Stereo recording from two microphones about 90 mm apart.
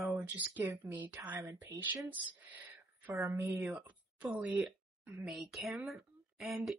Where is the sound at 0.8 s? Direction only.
20° right (ahead or behind).